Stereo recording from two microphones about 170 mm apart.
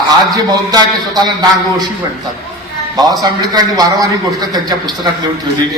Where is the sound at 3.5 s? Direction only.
20° right (ahead or behind).